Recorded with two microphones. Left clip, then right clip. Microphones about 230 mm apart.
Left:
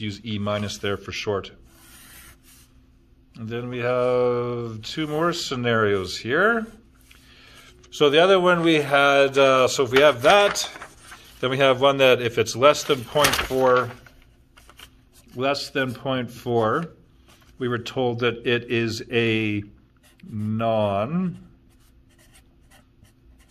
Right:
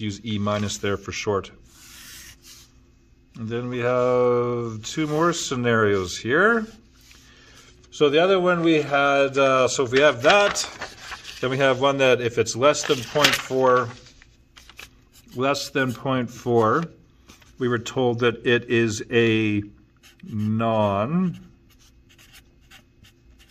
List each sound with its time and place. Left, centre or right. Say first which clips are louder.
0.0 s speech: right 1 dB; right
3.3 s speech: right 2 dB; right
7.2 s a sound: left 1 dB; right
7.6 s a man's voice: left 1 dB; centre
15.3 s speech: right 1 dB; right